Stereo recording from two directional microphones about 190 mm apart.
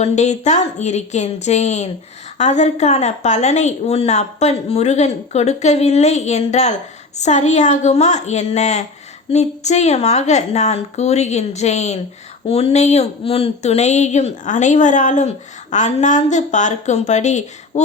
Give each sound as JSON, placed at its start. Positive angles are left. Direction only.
{"t": 0.0, "sound": "speech", "side_deg": 35}